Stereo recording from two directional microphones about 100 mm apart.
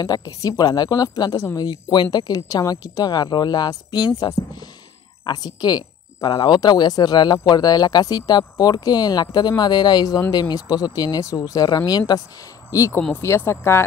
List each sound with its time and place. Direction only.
0.0 s speech: 40° left (ahead or behind)
1.7 s speech: 45° left (ahead or behind)
4.2 s speech: 35° left (ahead or behind)
5.2 s speech: 45° left (ahead or behind)
13.1 s speech: 25° left (ahead or behind)